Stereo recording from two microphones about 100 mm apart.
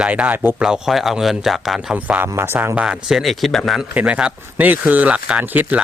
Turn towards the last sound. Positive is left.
turn(degrees=-15)  # may be behind; listen again after turning